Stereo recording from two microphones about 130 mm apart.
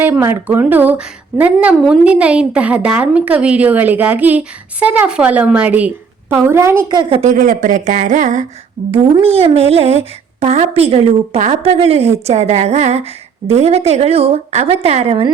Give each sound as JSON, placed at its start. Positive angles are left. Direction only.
{"t": 0.0, "sound": "a woman's voice", "side_deg": -15}
{"t": 6.8, "sound": "a woman's voice", "side_deg": -35}
{"t": 7.1, "sound": "speech", "side_deg": -65}
{"t": 8.9, "sound": "speech", "side_deg": -45}